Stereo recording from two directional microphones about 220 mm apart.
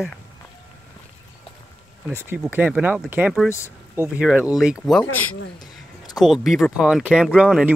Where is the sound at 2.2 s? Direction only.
5° right (ahead or behind).